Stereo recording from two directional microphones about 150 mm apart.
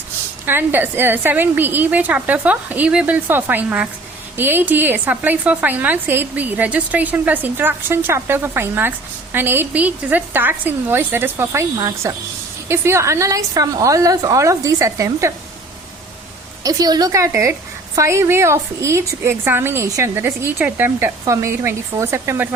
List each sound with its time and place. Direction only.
0.4 s a woman's voice: 15° right (ahead or behind)
16.6 s a woman's voice: 25° right (ahead or behind)